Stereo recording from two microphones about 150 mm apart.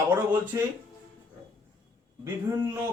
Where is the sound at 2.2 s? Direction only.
20° right (ahead or behind).